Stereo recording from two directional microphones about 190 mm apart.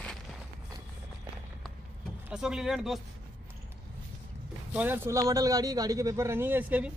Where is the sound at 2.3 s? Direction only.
5° right (ahead or behind).